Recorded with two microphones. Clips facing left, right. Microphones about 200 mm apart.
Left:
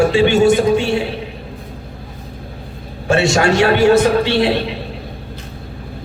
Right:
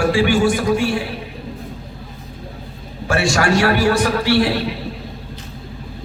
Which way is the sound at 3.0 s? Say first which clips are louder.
Left 4 dB; 25° left (ahead or behind).